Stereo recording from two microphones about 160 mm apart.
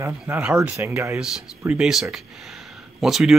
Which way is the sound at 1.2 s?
5° right (ahead or behind).